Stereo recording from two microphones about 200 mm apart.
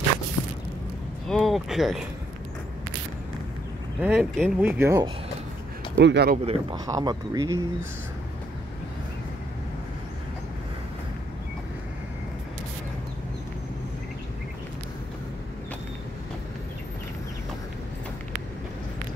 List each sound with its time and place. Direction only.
1.2 s speech: centre (ahead or behind)
4.0 s speech: 5° right (ahead or behind)
5.9 s speech: 60° right (ahead or behind)
6.3 s a man's voice: 30° right (ahead or behind)
6.9 s speech: 15° right (ahead or behind)